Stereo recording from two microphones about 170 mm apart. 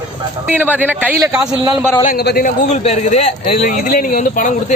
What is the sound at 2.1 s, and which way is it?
Speech, 65° left (ahead or behind).